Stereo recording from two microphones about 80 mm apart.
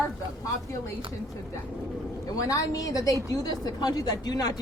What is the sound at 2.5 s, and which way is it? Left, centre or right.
A woman's voice, left.